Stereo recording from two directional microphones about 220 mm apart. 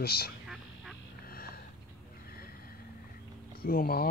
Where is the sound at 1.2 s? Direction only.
45° left (ahead or behind).